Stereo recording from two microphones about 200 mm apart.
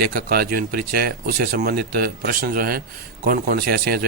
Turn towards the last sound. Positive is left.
turn(degrees=-50)  # may be behind; listen again after turning